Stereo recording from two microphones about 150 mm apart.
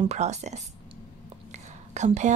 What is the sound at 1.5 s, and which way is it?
Whispering, 50° right (ahead or behind).